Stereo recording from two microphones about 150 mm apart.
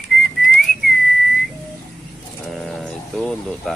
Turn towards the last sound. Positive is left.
turn(degrees=5)  # may be behind; listen again after turning